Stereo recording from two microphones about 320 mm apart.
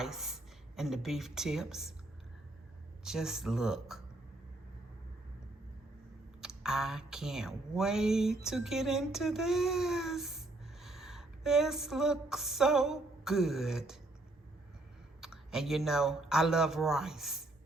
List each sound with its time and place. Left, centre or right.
0.0 s a sound: centre
0.8 s speech: centre
3.0 s speech: centre
6.4 s speech: centre
15.2 s speech: centre